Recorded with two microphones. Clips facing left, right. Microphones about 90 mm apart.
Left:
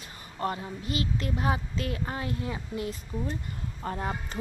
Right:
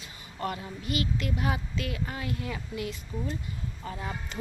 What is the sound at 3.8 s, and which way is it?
Speech, 45° left (ahead or behind).